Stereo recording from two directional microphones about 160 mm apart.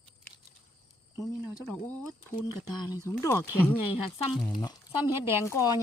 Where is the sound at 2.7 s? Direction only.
25° left (ahead or behind).